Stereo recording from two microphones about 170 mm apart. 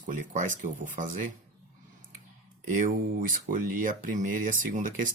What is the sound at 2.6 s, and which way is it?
Speech, 50° right (ahead or behind).